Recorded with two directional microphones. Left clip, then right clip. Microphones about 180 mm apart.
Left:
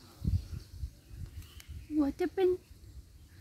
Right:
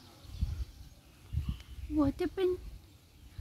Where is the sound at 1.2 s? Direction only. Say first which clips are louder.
Right 7 dB; 80° left.